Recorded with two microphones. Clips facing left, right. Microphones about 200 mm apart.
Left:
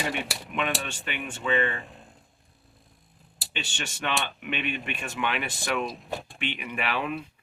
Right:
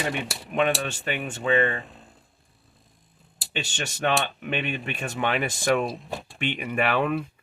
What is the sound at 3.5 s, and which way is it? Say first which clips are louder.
Speech: right 4 dB; 40° right (ahead or behind).